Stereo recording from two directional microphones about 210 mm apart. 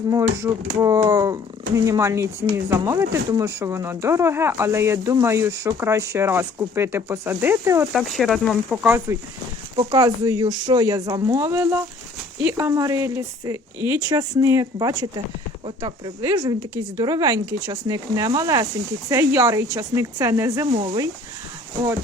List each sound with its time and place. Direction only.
0.1 s speech: 15° right (ahead or behind)
7.9 s speech: centre (ahead or behind)
20.7 s speech: 25° right (ahead or behind)